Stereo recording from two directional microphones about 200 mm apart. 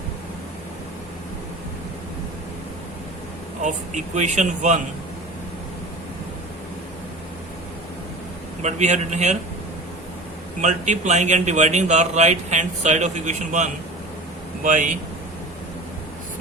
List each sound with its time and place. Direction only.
3.6 s speech: 35° right (ahead or behind)
8.6 s speech: 35° right (ahead or behind)
10.6 s speech: 35° right (ahead or behind)